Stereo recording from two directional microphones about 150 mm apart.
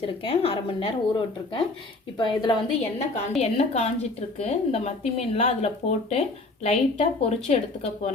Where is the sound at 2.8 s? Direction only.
45° left (ahead or behind).